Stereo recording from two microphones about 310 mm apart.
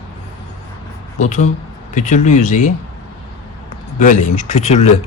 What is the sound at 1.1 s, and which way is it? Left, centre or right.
Speech, left.